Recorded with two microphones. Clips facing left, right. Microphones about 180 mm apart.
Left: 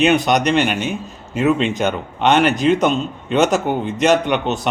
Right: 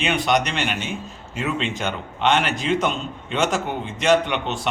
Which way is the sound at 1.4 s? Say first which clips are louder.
Left 9 dB; 55° left (ahead or behind).